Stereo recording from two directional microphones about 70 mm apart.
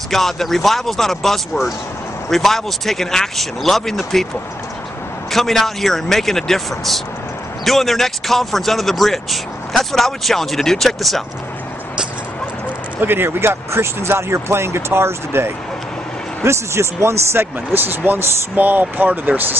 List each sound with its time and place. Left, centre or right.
0.1 s speech: centre
5.3 s speech: centre
13.0 s speech: right